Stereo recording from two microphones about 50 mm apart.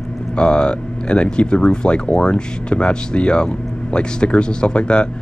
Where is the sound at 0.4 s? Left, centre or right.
Centre.